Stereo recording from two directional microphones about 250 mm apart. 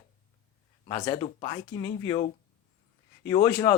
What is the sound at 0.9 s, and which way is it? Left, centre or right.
Speech, centre.